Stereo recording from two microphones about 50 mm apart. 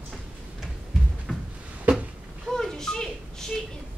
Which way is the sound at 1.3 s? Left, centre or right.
Centre.